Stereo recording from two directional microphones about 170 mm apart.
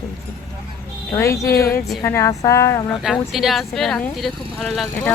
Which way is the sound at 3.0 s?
Centre (ahead or behind).